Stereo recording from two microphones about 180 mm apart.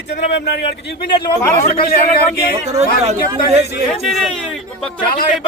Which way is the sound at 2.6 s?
35° right (ahead or behind).